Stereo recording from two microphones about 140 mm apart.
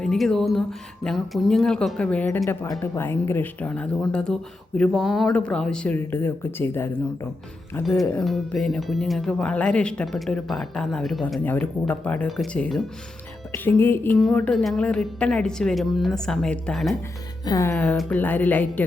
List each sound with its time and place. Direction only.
0.0 s speech: 5° left (ahead or behind)
8.2 s speech: centre (ahead or behind)
11.4 s speech: 10° left (ahead or behind)
13.7 s speech: 15° left (ahead or behind)
17.4 s speech: 25° left (ahead or behind)